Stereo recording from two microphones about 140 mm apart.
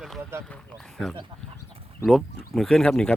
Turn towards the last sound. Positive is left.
turn(degrees=5)  # may be behind; listen again after turning